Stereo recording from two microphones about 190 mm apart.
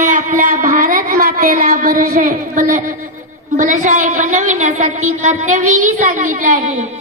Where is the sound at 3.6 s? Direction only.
40° right (ahead or behind).